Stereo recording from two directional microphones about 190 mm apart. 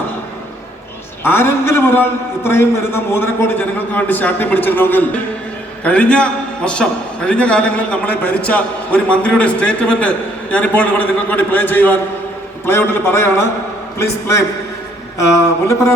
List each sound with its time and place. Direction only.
1.2 s a man's voice: 10° left (ahead or behind)
15.6 s a man's voice: 15° left (ahead or behind)